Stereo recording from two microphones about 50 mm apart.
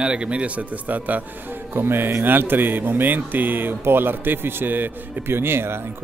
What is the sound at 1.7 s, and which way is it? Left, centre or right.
Speech, right.